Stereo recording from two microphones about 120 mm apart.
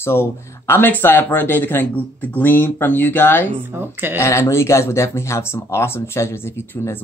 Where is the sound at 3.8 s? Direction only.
20° right (ahead or behind).